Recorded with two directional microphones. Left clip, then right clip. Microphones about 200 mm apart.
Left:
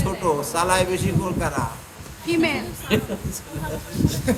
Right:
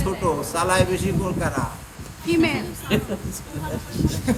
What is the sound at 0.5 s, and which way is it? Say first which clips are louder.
Speech: right 1 dB; 45° left (ahead or behind).